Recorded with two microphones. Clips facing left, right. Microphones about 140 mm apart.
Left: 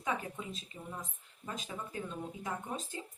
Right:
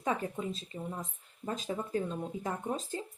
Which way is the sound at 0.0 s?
40° right (ahead or behind).